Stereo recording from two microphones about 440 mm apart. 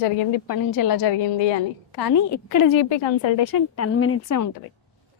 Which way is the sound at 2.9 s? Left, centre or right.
Left.